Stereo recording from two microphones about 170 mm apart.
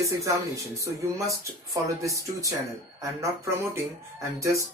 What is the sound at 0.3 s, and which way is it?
Speech, 20° right (ahead or behind).